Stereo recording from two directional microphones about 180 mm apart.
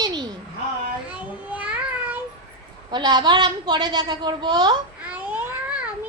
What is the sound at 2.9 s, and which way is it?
Speech, 25° right (ahead or behind).